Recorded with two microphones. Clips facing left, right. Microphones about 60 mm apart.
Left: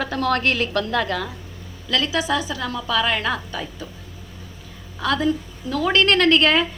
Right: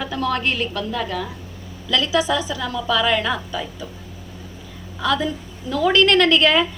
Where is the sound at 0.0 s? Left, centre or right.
Left.